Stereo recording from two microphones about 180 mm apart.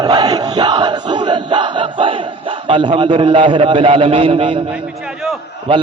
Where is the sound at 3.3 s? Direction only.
30° right (ahead or behind).